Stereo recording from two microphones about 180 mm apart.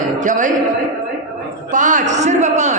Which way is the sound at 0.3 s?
45° right (ahead or behind).